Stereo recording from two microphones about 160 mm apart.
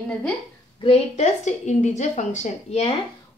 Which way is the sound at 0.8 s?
40° left (ahead or behind).